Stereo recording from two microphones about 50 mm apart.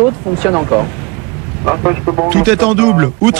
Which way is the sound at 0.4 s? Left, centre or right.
Centre.